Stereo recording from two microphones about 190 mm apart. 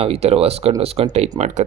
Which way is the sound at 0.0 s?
30° right (ahead or behind).